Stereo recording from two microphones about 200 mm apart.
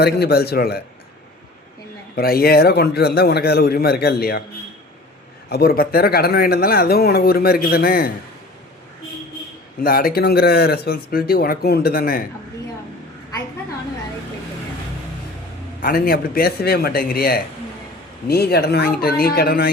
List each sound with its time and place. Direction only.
0.0 s speech: 55° left (ahead or behind)
2.1 s speech: 50° left (ahead or behind)
5.5 s speech: 50° left (ahead or behind)
9.8 s speech: 45° left (ahead or behind)
15.8 s speech: 50° left (ahead or behind)